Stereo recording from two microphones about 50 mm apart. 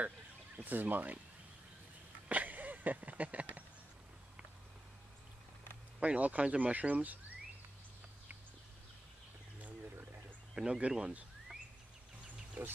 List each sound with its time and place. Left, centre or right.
0.6 s speech: right
2.2 s a sound: right
5.9 s speech: right
10.5 s speech: centre
12.6 s speech: right